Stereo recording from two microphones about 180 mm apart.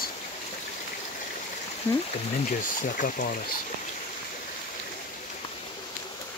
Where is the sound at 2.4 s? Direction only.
45° left (ahead or behind).